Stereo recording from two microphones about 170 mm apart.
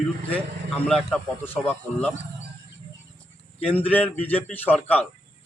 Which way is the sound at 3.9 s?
10° left (ahead or behind).